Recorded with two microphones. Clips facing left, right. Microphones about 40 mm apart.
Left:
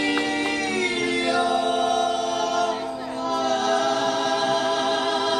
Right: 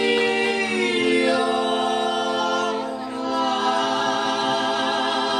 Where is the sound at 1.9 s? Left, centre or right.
Right.